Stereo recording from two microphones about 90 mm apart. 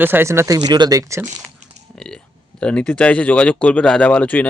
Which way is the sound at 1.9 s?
10° left (ahead or behind).